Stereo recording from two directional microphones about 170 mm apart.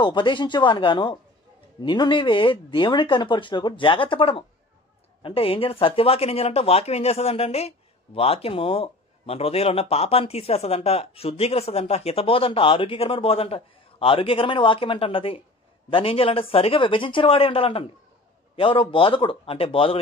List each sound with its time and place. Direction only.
0.0 s speech: 30° left (ahead or behind)